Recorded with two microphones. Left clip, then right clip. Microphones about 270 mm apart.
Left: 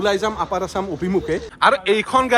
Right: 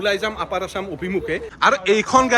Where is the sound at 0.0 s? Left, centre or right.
Centre.